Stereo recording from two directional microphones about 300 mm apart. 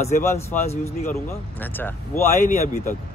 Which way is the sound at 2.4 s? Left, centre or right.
Left.